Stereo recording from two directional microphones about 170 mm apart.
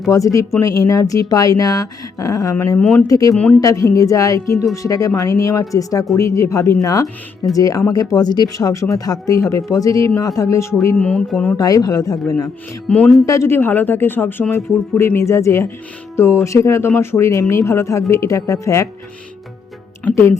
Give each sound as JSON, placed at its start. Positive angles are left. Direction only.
{"t": 0.1, "sound": "speech", "side_deg": 20}
{"t": 3.1, "sound": "speech", "side_deg": 20}
{"t": 3.3, "sound": "speech", "side_deg": 10}
{"t": 3.6, "sound": "speech", "side_deg": 20}
{"t": 11.5, "sound": "speech", "side_deg": 20}
{"t": 12.9, "sound": "speech", "side_deg": 5}
{"t": 13.2, "sound": "speech", "side_deg": 20}
{"t": 20.1, "sound": "speech", "side_deg": 10}